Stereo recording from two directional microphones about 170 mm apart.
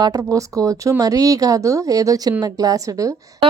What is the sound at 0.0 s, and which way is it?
A woman's voice, 20° right (ahead or behind).